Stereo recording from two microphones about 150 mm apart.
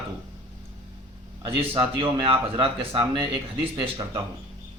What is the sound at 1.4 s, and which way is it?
A man's voice, 35° right (ahead or behind).